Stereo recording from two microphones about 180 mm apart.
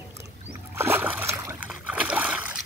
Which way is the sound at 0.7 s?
10° right (ahead or behind).